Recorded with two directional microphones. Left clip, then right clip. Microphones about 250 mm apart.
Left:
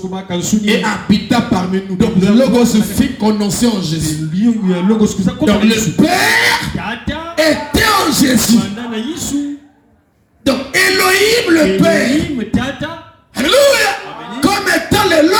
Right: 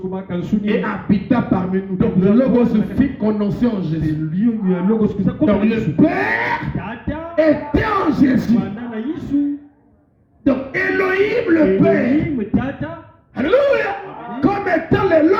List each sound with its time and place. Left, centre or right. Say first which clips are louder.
0.1 s speech: left 5 dB; left
10.4 s speech: left 6 dB; left
13.3 s a sound: left 5 dB; left